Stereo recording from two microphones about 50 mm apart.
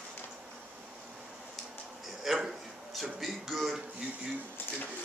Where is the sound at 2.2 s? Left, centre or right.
Centre.